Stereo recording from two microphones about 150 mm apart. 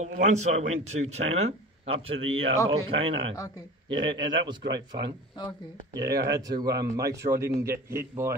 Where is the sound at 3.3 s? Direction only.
20° left (ahead or behind).